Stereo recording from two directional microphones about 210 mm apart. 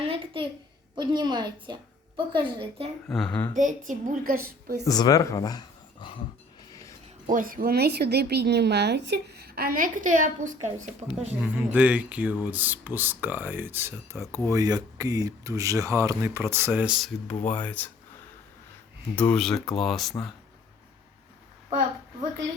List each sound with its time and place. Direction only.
0.0 s a sound: 25° right (ahead or behind)
0.9 s a woman's voice: 20° right (ahead or behind)
3.1 s speech: 5° left (ahead or behind)
3.5 s a woman's voice: 35° right (ahead or behind)
4.9 s speech: 20° left (ahead or behind)
7.3 s a woman's voice: 40° right (ahead or behind)
11.3 s speech: 5° right (ahead or behind)
19.1 s speech: 5° left (ahead or behind)